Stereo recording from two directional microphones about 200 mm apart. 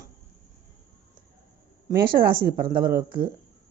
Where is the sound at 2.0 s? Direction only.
45° right (ahead or behind).